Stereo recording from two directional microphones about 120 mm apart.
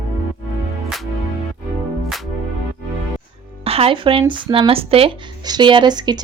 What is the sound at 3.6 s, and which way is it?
Speech, 55° right (ahead or behind).